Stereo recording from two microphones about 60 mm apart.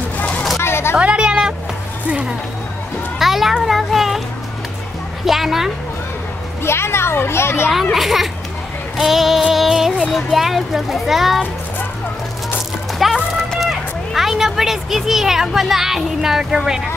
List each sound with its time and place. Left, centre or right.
0.2 s a sound: centre
0.6 s a sound: left
0.9 s a woman's voice: centre
3.2 s a child's voice: centre
5.2 s a child's voice: centre
6.6 s a child's voice: left
7.7 s a child's voice: centre
13.0 s music: centre
13.6 s speech: centre